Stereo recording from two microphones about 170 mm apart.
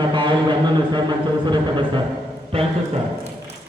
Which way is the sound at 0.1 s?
25° right (ahead or behind).